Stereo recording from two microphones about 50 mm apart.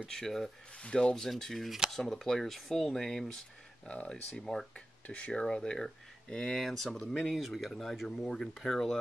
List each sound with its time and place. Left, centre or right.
0.1 s speech: centre
0.7 s speech: centre
3.8 s speech: left
4.4 s speech: centre
5.0 s speech: left; by 8.9 s centre